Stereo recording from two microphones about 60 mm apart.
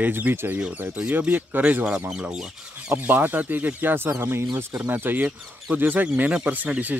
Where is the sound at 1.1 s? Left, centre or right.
Right.